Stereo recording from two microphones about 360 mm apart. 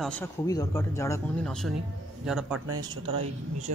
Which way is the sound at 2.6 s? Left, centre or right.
Right.